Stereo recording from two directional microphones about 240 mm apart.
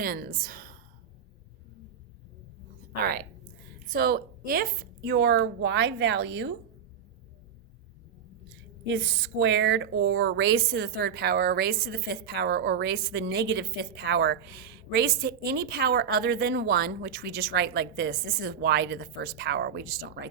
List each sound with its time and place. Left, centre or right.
0.0 s a woman's voice: right
3.0 s a woman's voice: right
8.9 s speech: right